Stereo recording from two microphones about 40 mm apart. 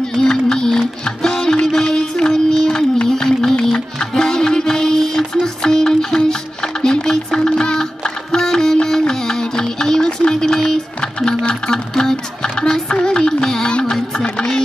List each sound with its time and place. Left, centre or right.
0.1 s music: centre
8.7 s a sound: centre
11.4 s music: centre